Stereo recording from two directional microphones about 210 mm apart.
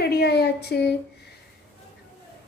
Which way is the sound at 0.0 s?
50° left (ahead or behind).